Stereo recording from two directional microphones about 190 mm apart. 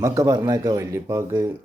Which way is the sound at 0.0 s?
15° right (ahead or behind).